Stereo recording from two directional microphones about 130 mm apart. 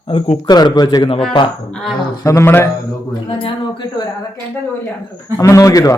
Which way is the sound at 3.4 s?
35° left (ahead or behind).